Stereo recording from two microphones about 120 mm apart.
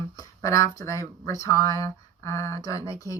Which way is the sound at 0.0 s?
25° left (ahead or behind).